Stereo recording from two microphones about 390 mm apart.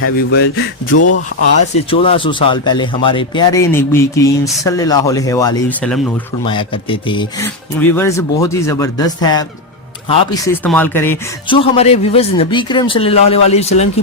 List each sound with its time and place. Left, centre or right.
0.0 s speech: left
1.7 s speech: centre
10.4 s speech: centre